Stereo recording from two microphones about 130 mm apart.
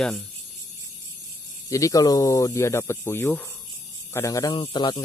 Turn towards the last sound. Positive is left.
turn(degrees=35)  # may be behind; listen again after turning